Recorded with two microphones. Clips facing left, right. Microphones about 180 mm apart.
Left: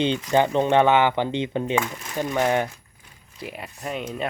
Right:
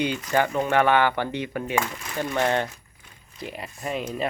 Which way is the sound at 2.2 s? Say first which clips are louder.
Left 2 dB; 15° left (ahead or behind).